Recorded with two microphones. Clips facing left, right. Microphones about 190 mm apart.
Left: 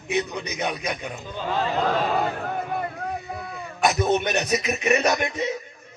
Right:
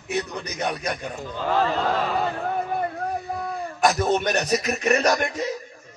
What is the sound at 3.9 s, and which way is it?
Speech, 20° left (ahead or behind).